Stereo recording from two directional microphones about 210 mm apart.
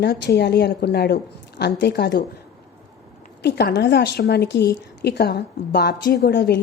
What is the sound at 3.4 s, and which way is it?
Speech, 55° left (ahead or behind).